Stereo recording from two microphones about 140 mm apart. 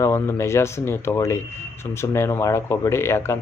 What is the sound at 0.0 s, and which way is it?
A man's voice, 20° left (ahead or behind).